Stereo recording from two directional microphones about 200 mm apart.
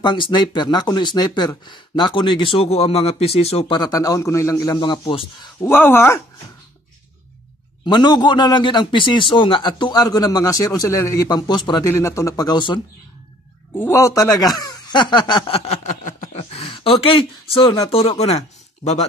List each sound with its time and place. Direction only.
0.0 s speech: 20° left (ahead or behind)
5.6 s speech: 10° left (ahead or behind)
7.8 s speech: 20° left (ahead or behind)